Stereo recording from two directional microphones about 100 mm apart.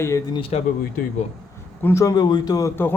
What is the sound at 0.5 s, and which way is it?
Speech, 90° left.